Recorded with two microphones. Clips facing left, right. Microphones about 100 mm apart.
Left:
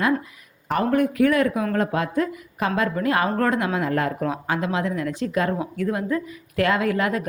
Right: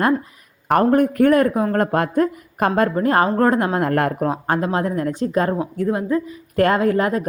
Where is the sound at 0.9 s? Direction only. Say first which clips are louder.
Right 3 dB; 45° right (ahead or behind).